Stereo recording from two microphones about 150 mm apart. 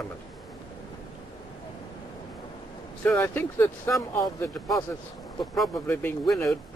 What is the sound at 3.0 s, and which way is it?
Speech, 10° left (ahead or behind).